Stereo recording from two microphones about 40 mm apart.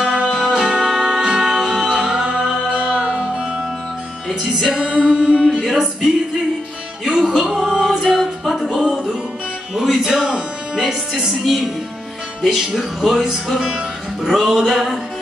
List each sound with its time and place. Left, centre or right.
0.0 s music: centre
4.3 s music: centre
4.6 s music: centre
5.4 s music: centre
7.1 s music: centre
8.6 s music: centre
11.4 s speech: centre
14.4 s music: centre